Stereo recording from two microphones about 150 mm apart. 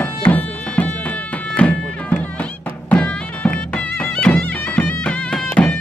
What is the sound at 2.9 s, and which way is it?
Music, 10° left (ahead or behind).